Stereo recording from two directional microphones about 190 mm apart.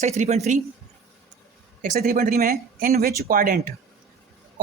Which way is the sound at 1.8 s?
50° right (ahead or behind).